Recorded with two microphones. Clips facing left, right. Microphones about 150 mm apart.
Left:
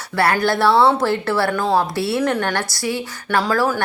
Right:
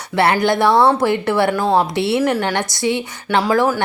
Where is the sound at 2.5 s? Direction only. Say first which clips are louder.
Right 4 dB; 20° right (ahead or behind).